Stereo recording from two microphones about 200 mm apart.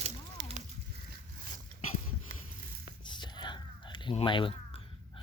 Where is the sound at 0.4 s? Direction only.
65° right (ahead or behind).